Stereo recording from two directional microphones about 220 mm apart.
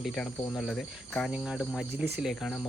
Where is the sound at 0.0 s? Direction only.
Centre (ahead or behind).